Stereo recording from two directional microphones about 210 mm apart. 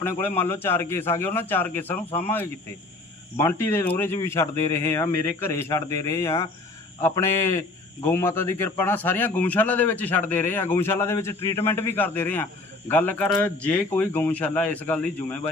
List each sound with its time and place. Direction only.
0.0 s a man's voice: 10° left (ahead or behind)
2.0 s speech: 30° left (ahead or behind)
3.3 s a man's voice: 10° left (ahead or behind)